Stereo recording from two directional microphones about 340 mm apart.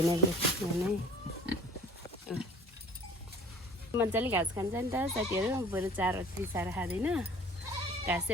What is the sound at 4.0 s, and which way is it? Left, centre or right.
Speech, centre.